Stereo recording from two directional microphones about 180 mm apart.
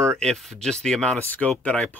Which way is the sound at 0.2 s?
5° left (ahead or behind).